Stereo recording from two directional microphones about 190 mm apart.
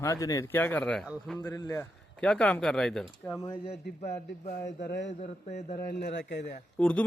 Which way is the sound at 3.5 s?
30° left (ahead or behind).